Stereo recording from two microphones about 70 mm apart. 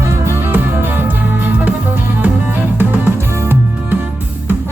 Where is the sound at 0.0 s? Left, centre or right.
Right.